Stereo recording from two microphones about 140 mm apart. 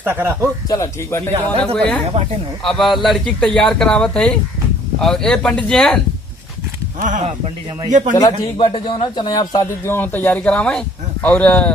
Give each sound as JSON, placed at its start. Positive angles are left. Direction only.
{"t": 0.0, "sound": "speech", "side_deg": -15}
{"t": 0.7, "sound": "speech", "side_deg": 20}
{"t": 1.6, "sound": "speech", "side_deg": 5}
{"t": 7.0, "sound": "speech", "side_deg": -65}
{"t": 8.1, "sound": "a man's voice", "side_deg": 35}